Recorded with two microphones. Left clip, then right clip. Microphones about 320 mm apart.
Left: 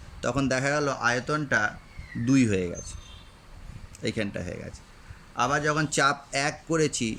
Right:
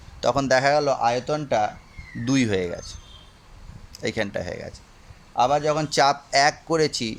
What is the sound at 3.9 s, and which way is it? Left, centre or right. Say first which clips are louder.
Speech: right 4 dB; centre.